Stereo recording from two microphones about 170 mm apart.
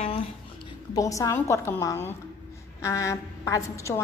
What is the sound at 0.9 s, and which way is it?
A woman's voice, 20° left (ahead or behind).